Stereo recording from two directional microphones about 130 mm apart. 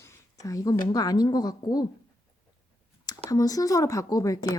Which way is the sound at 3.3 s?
25° left (ahead or behind).